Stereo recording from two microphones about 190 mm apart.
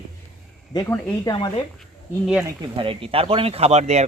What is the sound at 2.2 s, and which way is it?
Speech, 5° right (ahead or behind).